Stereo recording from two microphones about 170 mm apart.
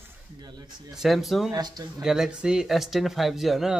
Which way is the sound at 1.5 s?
25° right (ahead or behind).